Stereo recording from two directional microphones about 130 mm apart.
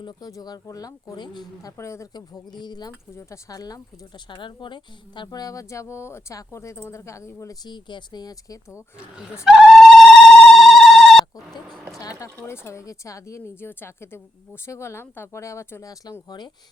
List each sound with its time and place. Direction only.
0.0 s speech: 35° left (ahead or behind)
1.7 s speech: 20° left (ahead or behind)
9.4 s telephone: 5° right (ahead or behind)
11.9 s speech: 25° left (ahead or behind)